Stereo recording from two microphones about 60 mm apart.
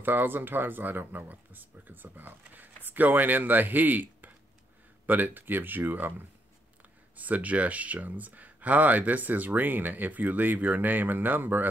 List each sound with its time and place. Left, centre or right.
0.0 s speech: right